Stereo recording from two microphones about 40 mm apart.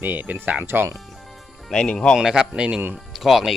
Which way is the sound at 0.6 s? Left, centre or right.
Right.